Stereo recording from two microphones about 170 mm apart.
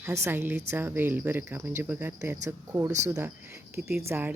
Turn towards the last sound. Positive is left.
turn(degrees=-10)  # may be behind; listen again after turning